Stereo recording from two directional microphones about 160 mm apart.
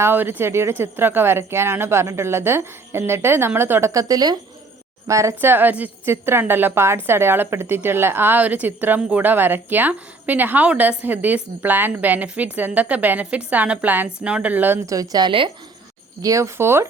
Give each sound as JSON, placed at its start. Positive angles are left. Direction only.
{"t": 0.0, "sound": "speech", "side_deg": -15}
{"t": 16.2, "sound": "speech", "side_deg": -20}